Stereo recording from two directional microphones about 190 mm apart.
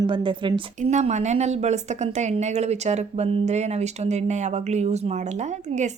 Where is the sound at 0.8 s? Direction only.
40° right (ahead or behind).